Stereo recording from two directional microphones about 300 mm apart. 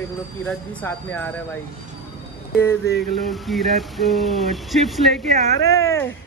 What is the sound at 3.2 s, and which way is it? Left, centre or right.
Speech, centre.